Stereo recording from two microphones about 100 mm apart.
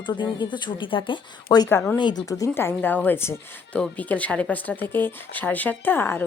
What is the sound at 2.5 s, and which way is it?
Speech, 20° left (ahead or behind).